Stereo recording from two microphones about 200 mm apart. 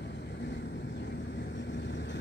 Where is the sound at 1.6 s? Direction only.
65° left (ahead or behind).